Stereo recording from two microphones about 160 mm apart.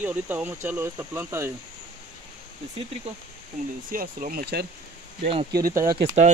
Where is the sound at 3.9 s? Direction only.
60° right (ahead or behind).